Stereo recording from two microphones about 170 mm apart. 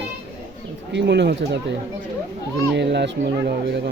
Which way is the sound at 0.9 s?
90° right.